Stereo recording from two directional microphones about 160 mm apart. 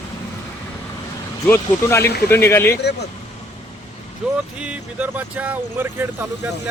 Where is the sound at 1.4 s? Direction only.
15° left (ahead or behind).